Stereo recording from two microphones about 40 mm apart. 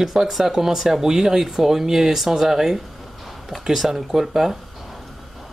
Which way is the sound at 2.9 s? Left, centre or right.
Centre.